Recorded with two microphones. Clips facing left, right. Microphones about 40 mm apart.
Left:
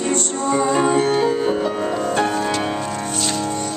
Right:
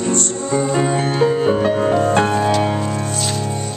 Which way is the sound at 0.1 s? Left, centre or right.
Left.